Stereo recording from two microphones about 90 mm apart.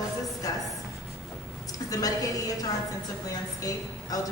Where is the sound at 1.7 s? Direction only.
40° left (ahead or behind).